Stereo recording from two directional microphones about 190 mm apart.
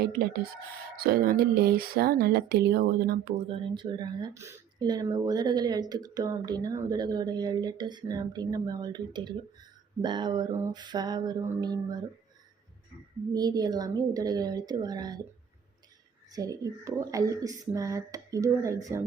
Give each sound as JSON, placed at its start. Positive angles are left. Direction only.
{"t": 0.9, "sound": "speech", "side_deg": -50}
{"t": 3.5, "sound": "speech", "side_deg": -25}
{"t": 13.3, "sound": "speech", "side_deg": -20}
{"t": 16.3, "sound": "a child's voice", "side_deg": -20}